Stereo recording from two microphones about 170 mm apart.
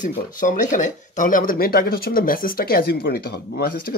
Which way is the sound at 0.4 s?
50° left (ahead or behind).